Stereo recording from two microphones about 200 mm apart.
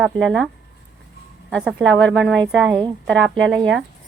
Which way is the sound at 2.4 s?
65° right (ahead or behind).